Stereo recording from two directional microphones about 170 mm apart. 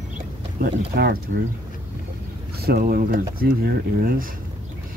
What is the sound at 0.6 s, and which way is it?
Speech, 60° right (ahead or behind).